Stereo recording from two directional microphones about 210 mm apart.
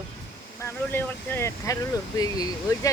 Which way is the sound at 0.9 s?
10° left (ahead or behind).